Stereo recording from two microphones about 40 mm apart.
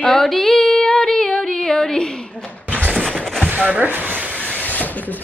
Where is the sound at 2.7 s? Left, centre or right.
Right.